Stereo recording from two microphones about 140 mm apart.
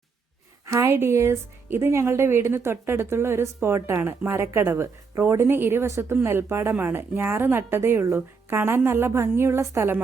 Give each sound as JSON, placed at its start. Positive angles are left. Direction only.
{"t": 0.6, "sound": "speech", "side_deg": -20}